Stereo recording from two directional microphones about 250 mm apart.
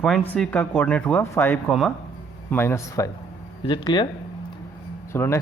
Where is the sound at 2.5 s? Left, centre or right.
Centre.